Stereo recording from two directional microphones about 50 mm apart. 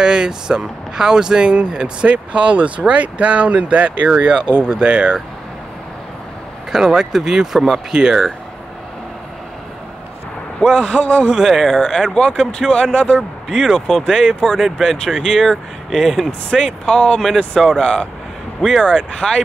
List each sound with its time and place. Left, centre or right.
0.0 s speech: centre
6.7 s speech: centre
11.0 s speech: left
11.2 s speech: centre
12.1 s speech: centre
13.5 s speech: centre
13.7 s speech: centre
14.0 s speech: centre
14.4 s speech: centre
14.8 s speech: centre
16.8 s speech: centre
18.6 s speech: centre
18.9 s speech: centre